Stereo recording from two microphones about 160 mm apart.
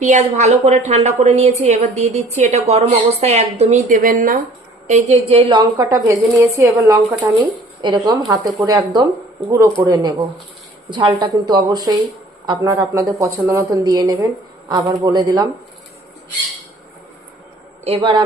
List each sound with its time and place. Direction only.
0.0 s a woman's voice: 50° right (ahead or behind)
4.9 s a woman's voice: 45° right (ahead or behind)
5.7 s a woman's voice: 20° right (ahead or behind)
7.3 s a woman's voice: 30° right (ahead or behind)
17.8 s a woman's voice: 35° right (ahead or behind)